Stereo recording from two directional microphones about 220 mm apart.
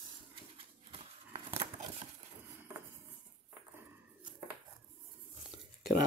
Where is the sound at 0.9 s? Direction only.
25° right (ahead or behind).